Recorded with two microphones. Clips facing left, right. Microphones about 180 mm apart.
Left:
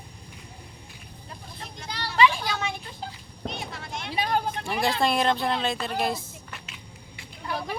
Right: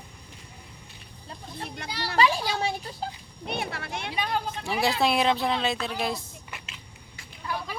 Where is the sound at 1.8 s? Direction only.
65° right (ahead or behind).